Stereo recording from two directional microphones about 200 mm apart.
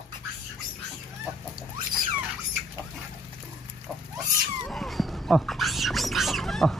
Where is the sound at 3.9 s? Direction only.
Centre (ahead or behind).